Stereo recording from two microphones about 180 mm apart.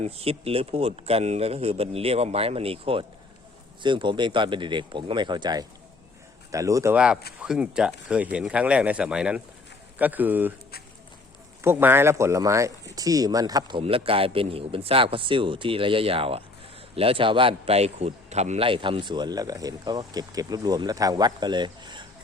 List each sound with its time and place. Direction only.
0.0 s a man's voice: 35° right (ahead or behind); by 6.9 s 15° right (ahead or behind)
6.9 s speech: 5° right (ahead or behind)
11.6 s a man's voice: 15° right (ahead or behind)